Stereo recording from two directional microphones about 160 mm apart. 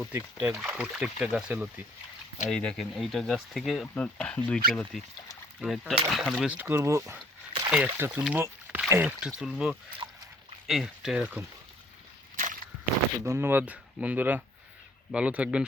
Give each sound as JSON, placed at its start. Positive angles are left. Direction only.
{"t": 0.0, "sound": "speech", "side_deg": -10}
{"t": 2.5, "sound": "speech", "side_deg": 5}
{"t": 10.0, "sound": "dog", "side_deg": -25}
{"t": 10.7, "sound": "speech", "side_deg": 0}
{"t": 12.4, "sound": "walk", "side_deg": -55}
{"t": 13.2, "sound": "speech", "side_deg": -15}